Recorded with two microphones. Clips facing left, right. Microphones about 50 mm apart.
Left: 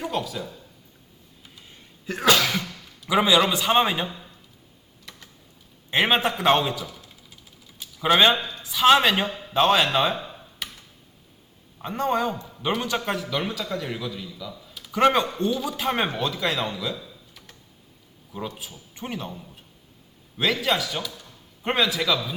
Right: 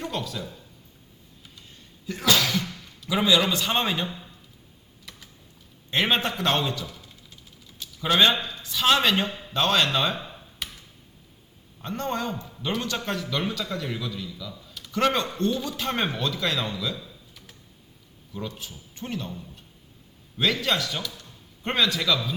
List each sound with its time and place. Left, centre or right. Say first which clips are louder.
0.0 s speech: left 3 dB; centre
2.2 s speech: left 3 dB; left
3.1 s speech: left 3 dB; left
5.1 s typing: left 1 dB; centre
5.9 s speech: left 3 dB; centre
7.8 s a sound: left 2 dB; centre
8.6 s speech: left 4 dB; centre
11.8 s speech: left 5 dB; centre
20.4 s a man's voice: left 1 dB; centre